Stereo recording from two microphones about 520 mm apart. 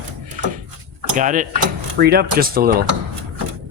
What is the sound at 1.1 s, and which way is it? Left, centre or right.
Speech, centre.